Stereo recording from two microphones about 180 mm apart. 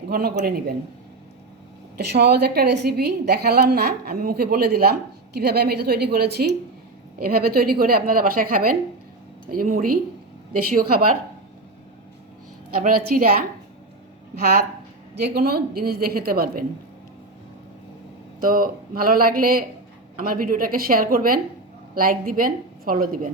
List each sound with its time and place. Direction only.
0.1 s a woman's voice: 60° right (ahead or behind)
2.0 s a woman's voice: 65° right (ahead or behind)
7.2 s a woman's voice: 55° right (ahead or behind)
12.7 s a woman's voice: 55° right (ahead or behind)
15.2 s a woman's voice: 60° right (ahead or behind)
18.3 s a woman's voice: 50° right (ahead or behind)